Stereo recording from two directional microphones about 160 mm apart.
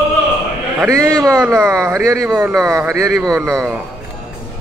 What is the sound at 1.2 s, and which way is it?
Speech, 15° right (ahead or behind).